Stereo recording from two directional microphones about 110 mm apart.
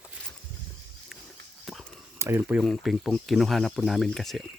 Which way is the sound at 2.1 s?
25° right (ahead or behind).